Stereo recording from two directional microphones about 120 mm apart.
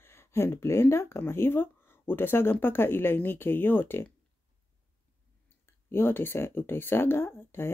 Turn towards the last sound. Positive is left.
turn(degrees=20)  # may be behind; listen again after turning